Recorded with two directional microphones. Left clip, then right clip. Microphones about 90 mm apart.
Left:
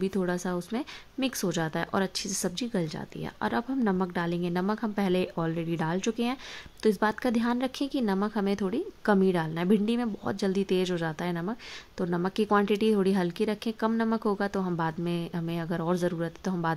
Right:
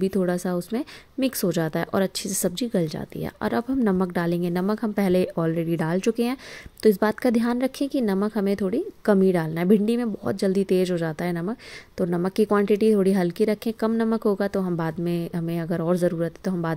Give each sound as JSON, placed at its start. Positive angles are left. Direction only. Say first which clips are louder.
{"t": 0.0, "sound": "a woman's voice", "louder": "right 6 dB", "side_deg": -30}